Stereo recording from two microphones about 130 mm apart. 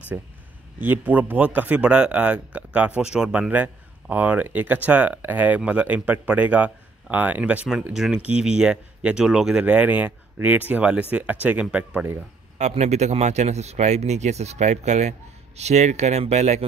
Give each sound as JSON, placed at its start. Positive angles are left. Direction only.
{"t": 0.1, "sound": "a man's voice", "side_deg": -10}
{"t": 12.5, "sound": "speech", "side_deg": -60}